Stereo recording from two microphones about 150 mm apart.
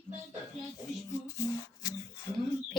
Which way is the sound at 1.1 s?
20° left (ahead or behind).